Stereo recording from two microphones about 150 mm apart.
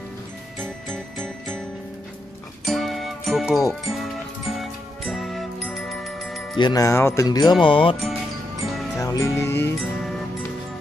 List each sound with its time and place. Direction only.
0.6 s music: centre (ahead or behind)
2.6 s music: centre (ahead or behind)
6.6 s speech: 25° left (ahead or behind)
7.6 s music: 35° left (ahead or behind)
8.9 s music: 20° left (ahead or behind)
9.8 s music: centre (ahead or behind)